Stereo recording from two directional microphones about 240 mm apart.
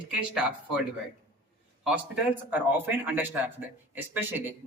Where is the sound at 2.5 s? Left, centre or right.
Centre.